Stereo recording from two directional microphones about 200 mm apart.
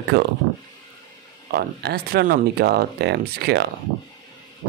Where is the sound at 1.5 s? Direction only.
50° right (ahead or behind).